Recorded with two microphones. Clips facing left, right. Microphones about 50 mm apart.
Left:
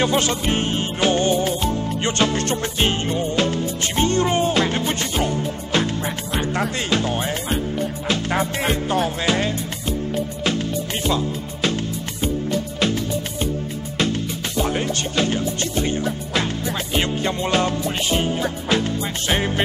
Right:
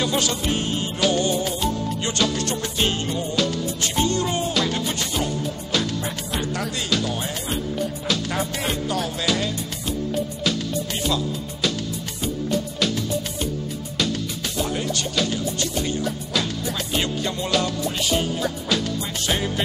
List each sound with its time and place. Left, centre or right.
0.0 s music: left
6.3 s speech: left
8.1 s music: left
11.1 s music: left
14.6 s speech: left
16.9 s music: left